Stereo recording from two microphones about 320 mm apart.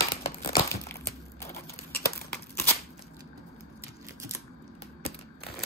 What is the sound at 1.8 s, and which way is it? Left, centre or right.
Crumpling, left.